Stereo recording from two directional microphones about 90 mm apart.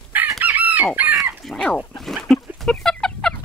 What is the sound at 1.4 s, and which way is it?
Fowl, 5° left (ahead or behind).